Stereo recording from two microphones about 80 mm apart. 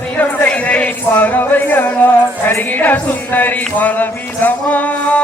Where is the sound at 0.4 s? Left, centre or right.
Centre.